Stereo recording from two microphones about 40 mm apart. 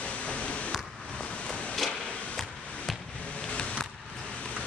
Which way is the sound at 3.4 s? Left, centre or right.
Left.